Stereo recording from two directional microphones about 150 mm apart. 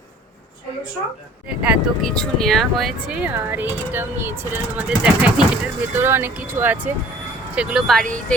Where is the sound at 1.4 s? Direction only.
5° right (ahead or behind).